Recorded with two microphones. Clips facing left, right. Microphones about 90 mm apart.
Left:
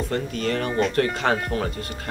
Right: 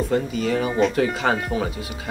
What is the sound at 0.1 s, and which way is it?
Speech, 5° right (ahead or behind).